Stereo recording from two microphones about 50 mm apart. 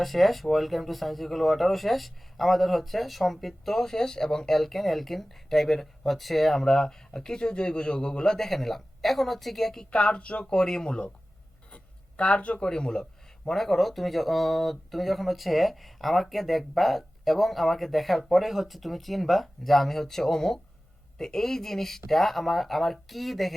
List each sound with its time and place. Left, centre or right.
0.0 s speech: centre
9.9 s speech: left; by 23.6 s centre